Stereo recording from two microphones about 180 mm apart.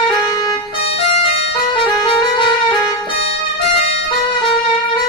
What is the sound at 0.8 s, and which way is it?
Music, 35° left (ahead or behind).